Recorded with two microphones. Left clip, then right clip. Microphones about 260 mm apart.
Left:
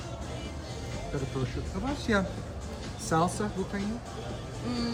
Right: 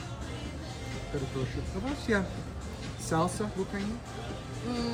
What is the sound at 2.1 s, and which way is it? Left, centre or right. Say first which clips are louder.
Speech: left 1 dB; centre.